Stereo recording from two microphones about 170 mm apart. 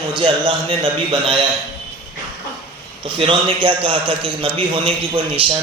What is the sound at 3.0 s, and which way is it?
A man's voice, 30° right (ahead or behind).